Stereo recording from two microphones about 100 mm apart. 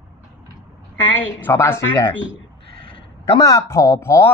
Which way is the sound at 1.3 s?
20° left (ahead or behind).